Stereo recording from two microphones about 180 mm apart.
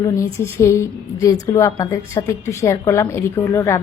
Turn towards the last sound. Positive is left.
turn(degrees=15)  # may be behind; listen again after turning